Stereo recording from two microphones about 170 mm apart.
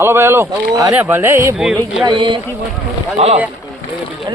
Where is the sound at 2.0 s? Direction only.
30° right (ahead or behind).